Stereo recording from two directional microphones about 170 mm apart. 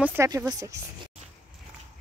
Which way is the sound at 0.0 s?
15° right (ahead or behind).